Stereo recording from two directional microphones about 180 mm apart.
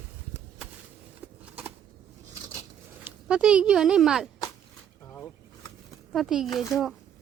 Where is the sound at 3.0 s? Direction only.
5° right (ahead or behind).